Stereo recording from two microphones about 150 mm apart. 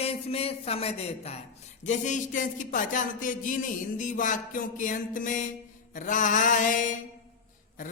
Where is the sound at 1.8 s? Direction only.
55° left (ahead or behind).